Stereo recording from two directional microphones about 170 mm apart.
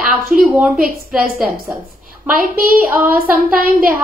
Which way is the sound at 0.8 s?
60° right (ahead or behind).